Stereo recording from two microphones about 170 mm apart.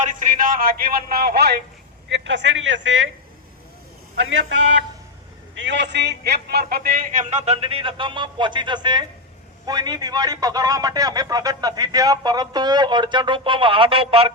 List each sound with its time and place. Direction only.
0.0 s a man's voice: 50° right (ahead or behind)
2.0 s speech: 90° right
5.5 s a man's voice: 90° right; by 14.3 s 35° right (ahead or behind)